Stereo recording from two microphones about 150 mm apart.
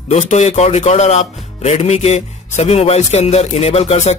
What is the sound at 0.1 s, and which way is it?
Speech, 50° left (ahead or behind).